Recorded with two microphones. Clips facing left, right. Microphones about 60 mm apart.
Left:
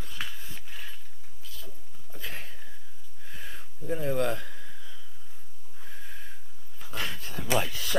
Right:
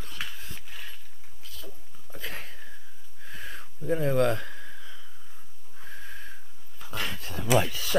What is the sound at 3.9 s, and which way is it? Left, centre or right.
Speech, right.